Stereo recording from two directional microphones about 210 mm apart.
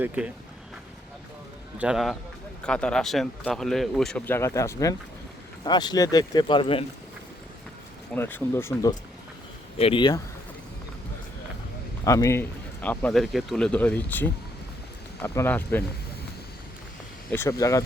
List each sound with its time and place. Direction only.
1.8 s speech: centre (ahead or behind); by 6.8 s 25° left (ahead or behind)
8.1 s speech: 10° left (ahead or behind)
9.7 s speech: 25° left (ahead or behind)
12.0 s speech: 15° left (ahead or behind)
17.3 s speech: 15° left (ahead or behind)